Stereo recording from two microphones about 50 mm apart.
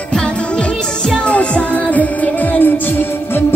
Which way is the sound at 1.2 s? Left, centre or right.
Left.